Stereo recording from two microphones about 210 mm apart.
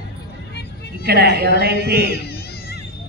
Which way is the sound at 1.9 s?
50° left (ahead or behind).